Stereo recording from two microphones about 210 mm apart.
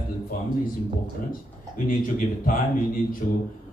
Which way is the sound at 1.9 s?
40° left (ahead or behind).